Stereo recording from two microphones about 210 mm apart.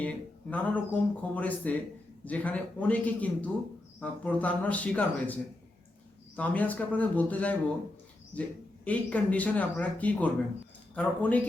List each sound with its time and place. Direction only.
0.0 s speech: 5° left (ahead or behind)